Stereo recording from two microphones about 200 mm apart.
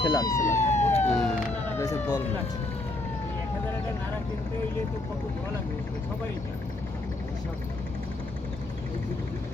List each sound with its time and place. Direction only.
0.0 s speech: 20° left (ahead or behind)
0.6 s emergency vehicle: 35° left (ahead or behind)
1.0 s a sound: 5° left (ahead or behind)